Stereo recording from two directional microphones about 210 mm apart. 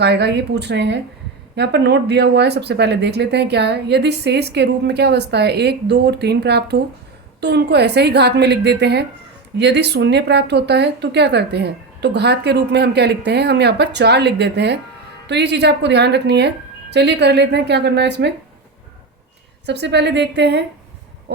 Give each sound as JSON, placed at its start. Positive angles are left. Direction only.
{"t": 0.0, "sound": "speech", "side_deg": -55}
{"t": 19.6, "sound": "speech", "side_deg": -55}